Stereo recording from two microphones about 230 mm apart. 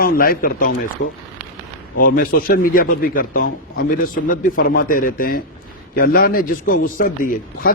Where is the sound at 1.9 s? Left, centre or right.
Left.